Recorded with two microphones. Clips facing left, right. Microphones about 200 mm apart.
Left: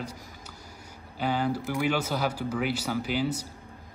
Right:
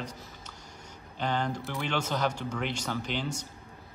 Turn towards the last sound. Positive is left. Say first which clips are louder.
# left 5 dB
turn(degrees=5)  # may be behind; listen again after turning